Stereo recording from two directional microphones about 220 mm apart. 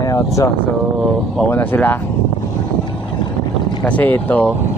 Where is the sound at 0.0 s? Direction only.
15° left (ahead or behind).